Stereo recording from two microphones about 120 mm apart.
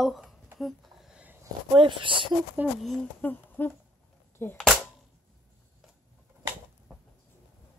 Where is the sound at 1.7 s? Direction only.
45° right (ahead or behind).